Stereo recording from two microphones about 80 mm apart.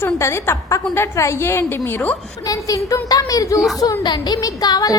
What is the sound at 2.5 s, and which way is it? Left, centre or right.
Speech, left.